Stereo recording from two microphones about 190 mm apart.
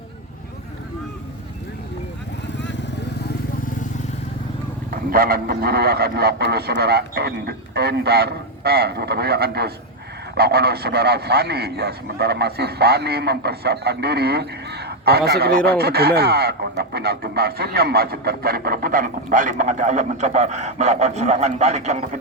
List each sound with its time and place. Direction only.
2.6 s vehicle: 65° left (ahead or behind)
4.9 s speech: 50° right (ahead or behind)